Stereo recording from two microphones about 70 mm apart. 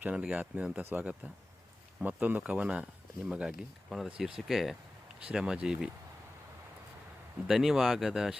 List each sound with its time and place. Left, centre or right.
0.0 s speech: centre
0.8 s speech: right; by 5.9 s centre
7.4 s speech: centre